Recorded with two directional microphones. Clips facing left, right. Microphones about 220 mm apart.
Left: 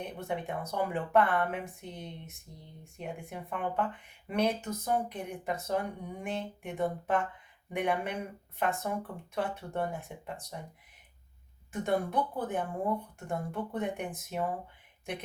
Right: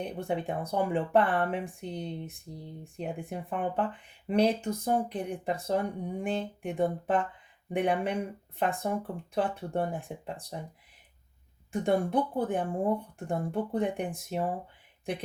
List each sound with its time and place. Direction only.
0.0 s speech: 30° right (ahead or behind)
11.7 s speech: 30° right (ahead or behind)